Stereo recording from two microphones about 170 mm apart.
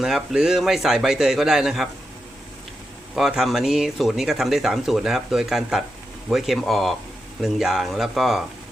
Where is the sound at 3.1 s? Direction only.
Centre (ahead or behind).